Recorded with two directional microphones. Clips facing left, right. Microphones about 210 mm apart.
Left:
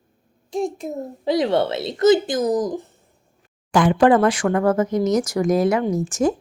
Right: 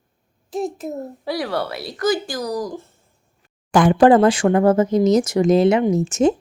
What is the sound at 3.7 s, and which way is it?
Speech, 45° right (ahead or behind).